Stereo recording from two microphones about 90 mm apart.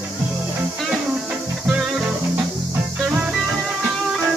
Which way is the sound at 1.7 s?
5° right (ahead or behind).